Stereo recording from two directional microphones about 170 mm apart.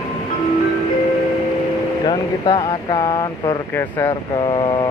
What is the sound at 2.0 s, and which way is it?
Speech, 30° left (ahead or behind).